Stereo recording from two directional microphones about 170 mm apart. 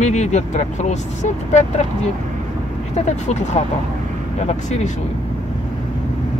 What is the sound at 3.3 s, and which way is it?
Speech, 45° left (ahead or behind).